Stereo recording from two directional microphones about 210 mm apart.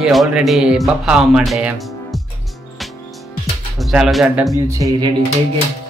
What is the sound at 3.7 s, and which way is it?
Speech, centre (ahead or behind).